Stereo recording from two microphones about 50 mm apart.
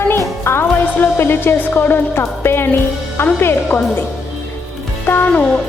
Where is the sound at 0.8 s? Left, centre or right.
Left.